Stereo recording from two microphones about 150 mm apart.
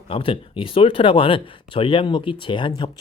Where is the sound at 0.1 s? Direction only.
35° left (ahead or behind).